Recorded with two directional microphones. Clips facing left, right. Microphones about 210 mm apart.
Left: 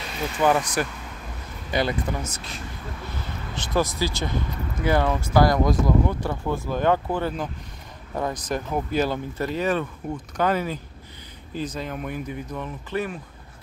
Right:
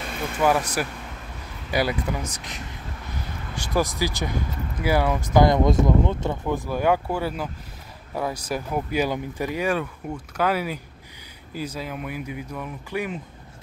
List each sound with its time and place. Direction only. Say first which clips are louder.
0.0 s vehicle: even; 55° right (ahead or behind)
0.4 s speech: even; 5° right (ahead or behind)